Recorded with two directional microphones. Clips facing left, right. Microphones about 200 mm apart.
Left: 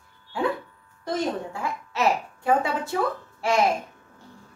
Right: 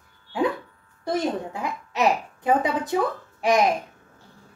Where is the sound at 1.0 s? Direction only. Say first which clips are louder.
Right 2 dB; 15° right (ahead or behind).